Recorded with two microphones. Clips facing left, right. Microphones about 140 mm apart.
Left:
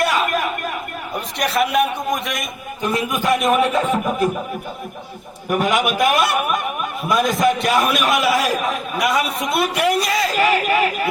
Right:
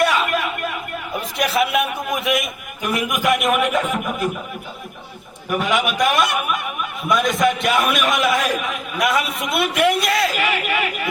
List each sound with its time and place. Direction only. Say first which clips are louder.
0.1 s a sound: left 1 dB; 40° left (ahead or behind)
1.4 s a man's voice: left 1 dB; centre (ahead or behind)
2.8 s a man's voice: even; 30° left (ahead or behind)
5.5 s speech: left 2 dB; 45° left (ahead or behind)
7.6 s a man's voice: left 1 dB; centre (ahead or behind)
7.9 s a man's voice: left 1 dB; 35° left (ahead or behind)
8.1 s a man's voice: left 2 dB; centre (ahead or behind)
8.4 s a man's voice: left 2 dB; 40° left (ahead or behind)
9.0 s a man's voice: even; centre (ahead or behind)
10.3 s a man's voice: left 5 dB; 40° left (ahead or behind)